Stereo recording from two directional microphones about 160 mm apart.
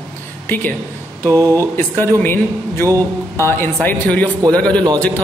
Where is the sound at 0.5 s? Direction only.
10° left (ahead or behind).